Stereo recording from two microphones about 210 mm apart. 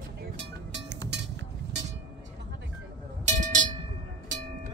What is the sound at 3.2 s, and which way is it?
Cowbell, 35° right (ahead or behind).